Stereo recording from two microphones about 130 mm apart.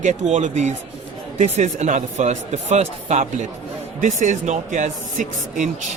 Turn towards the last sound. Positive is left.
turn(degrees=-75)  # may be behind; listen again after turning